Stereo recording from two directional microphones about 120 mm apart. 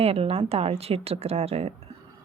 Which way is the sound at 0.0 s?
55° right (ahead or behind).